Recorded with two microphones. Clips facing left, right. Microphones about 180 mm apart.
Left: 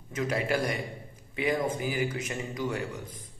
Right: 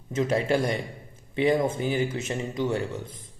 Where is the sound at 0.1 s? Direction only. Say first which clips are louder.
Right 5 dB; 25° right (ahead or behind).